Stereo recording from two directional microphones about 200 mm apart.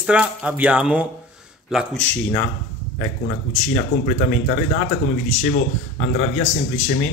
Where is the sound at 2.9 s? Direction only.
45° left (ahead or behind).